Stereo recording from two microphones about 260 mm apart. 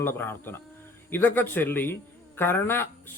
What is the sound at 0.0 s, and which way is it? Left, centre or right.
Speech, centre.